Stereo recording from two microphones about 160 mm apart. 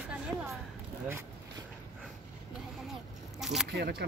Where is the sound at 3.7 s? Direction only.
90° right.